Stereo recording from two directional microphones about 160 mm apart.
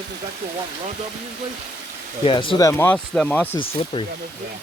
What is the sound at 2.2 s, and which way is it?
Speech, 35° left (ahead or behind).